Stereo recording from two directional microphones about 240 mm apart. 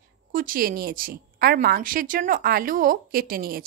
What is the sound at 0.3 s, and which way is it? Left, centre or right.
A woman's voice, right.